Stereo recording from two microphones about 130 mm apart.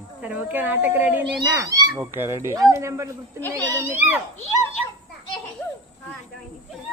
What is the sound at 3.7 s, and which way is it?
Speech, 25° right (ahead or behind).